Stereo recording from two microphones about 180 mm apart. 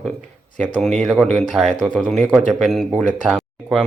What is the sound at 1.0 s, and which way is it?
Speech, 5° left (ahead or behind).